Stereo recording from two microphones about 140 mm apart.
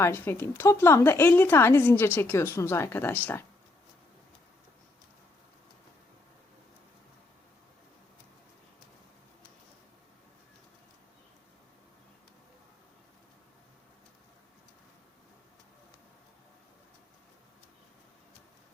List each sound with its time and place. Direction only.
0.0 s a woman's voice: 15° left (ahead or behind)